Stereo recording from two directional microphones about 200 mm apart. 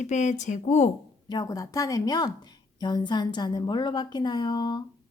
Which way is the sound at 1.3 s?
20° left (ahead or behind).